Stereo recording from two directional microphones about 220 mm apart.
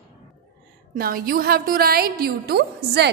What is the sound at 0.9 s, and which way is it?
A woman's voice, 40° right (ahead or behind).